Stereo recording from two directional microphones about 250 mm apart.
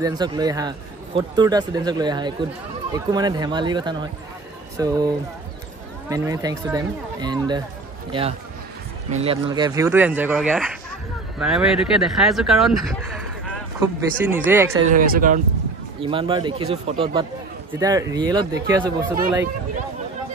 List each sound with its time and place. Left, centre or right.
0.0 s speech: centre
13.7 s speech: centre
14.9 s speech: right
16.0 s speech: right